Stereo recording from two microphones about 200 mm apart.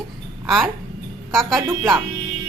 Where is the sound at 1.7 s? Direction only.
15° right (ahead or behind).